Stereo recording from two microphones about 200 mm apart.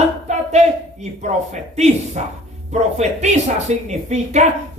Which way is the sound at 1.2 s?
35° right (ahead or behind).